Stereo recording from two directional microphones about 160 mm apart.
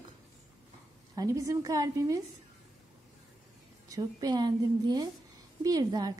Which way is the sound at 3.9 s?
25° right (ahead or behind).